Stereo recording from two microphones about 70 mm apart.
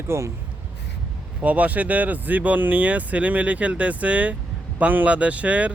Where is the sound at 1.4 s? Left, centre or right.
Right.